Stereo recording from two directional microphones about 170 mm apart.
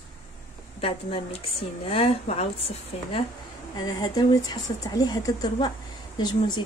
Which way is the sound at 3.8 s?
25° left (ahead or behind).